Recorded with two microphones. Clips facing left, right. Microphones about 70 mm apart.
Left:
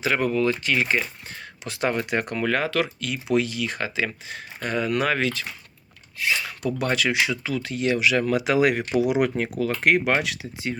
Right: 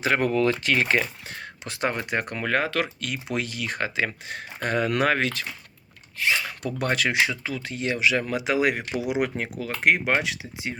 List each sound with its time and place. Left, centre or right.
0.0 s speech: right
1.4 s a sound: right
2.0 s speech: right
5.0 s speech: right; by 10.8 s centre